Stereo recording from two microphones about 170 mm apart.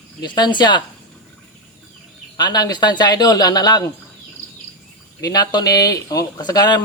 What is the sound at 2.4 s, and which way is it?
Speech, 25° left (ahead or behind).